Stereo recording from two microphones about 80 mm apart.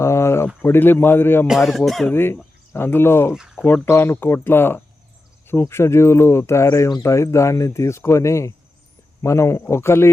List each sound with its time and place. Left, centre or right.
0.0 s a sound: left
0.6 s speech: left
1.5 s speech: centre
2.1 s speech: left
3.3 s a sound: centre
3.8 s speech: left